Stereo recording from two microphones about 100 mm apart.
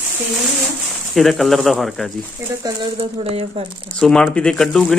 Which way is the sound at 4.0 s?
10° left (ahead or behind).